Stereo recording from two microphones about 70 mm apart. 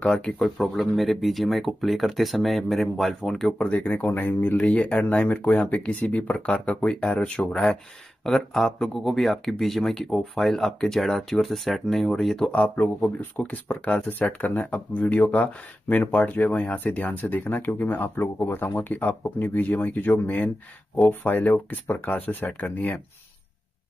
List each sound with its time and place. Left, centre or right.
0.0 s speech: centre
0.4 s speech: centre
3.5 s speech: centre
12.4 s speech: centre